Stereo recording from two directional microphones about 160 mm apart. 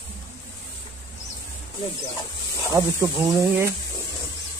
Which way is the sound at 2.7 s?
20° right (ahead or behind).